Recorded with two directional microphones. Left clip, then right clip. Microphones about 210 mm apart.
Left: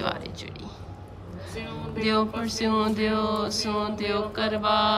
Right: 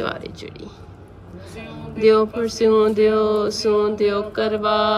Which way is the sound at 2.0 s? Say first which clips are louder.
Right 10 dB; 5° left (ahead or behind).